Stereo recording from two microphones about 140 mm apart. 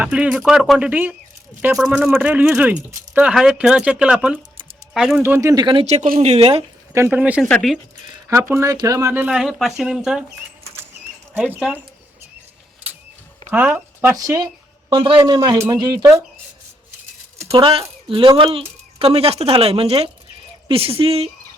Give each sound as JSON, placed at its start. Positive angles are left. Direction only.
{"t": 0.0, "sound": "speech", "side_deg": -10}
{"t": 5.2, "sound": "speech", "side_deg": -20}
{"t": 5.8, "sound": "speech", "side_deg": -50}
{"t": 6.9, "sound": "speech", "side_deg": -15}
{"t": 7.5, "sound": "speech", "side_deg": 0}
{"t": 8.3, "sound": "speech", "side_deg": -20}
{"t": 11.3, "sound": "speech", "side_deg": -15}
{"t": 13.5, "sound": "speech", "side_deg": -15}
{"t": 14.2, "sound": "speech", "side_deg": -25}
{"t": 15.2, "sound": "speech", "side_deg": -25}
{"t": 17.5, "sound": "speech", "side_deg": -40}